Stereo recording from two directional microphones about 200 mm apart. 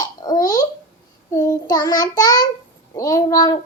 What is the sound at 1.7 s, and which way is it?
Speech, 20° left (ahead or behind).